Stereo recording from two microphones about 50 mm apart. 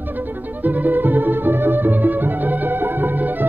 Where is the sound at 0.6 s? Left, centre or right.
Right.